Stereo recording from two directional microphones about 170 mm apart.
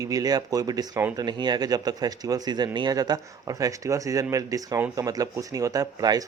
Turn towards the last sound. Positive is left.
turn(degrees=-20)  # may be behind; listen again after turning